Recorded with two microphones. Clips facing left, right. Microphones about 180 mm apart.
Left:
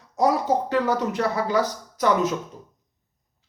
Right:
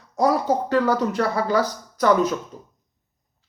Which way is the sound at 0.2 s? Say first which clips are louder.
Right 1 dB; 20° left (ahead or behind).